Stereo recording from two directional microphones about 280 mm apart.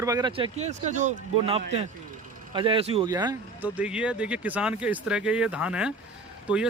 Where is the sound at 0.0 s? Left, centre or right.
Centre.